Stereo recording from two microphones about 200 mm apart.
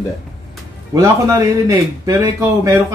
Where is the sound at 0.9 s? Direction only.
15° right (ahead or behind).